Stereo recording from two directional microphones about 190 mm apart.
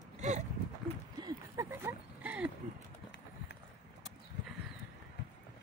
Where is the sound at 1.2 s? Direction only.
15° right (ahead or behind).